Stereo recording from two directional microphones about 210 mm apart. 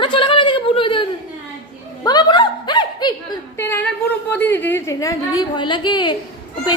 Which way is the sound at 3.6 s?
10° left (ahead or behind).